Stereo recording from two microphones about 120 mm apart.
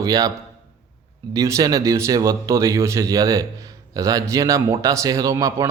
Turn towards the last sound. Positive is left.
turn(degrees=-25)  # may be behind; listen again after turning